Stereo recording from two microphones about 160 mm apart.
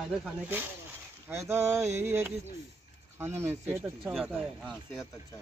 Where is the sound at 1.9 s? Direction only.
45° right (ahead or behind).